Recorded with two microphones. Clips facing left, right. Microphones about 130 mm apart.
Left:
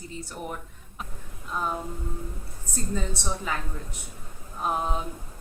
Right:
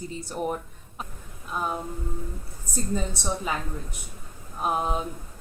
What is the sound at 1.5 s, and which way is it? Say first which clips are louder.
Speech: even; 10° right (ahead or behind).